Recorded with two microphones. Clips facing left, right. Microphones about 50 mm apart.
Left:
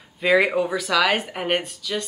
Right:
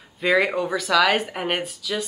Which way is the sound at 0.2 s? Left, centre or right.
Centre.